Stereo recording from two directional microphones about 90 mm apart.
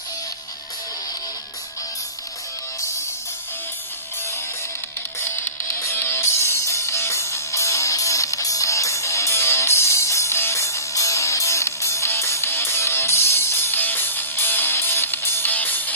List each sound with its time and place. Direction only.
5.2 s music: 30° left (ahead or behind)